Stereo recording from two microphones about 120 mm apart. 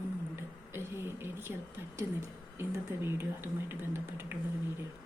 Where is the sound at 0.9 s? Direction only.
20° right (ahead or behind).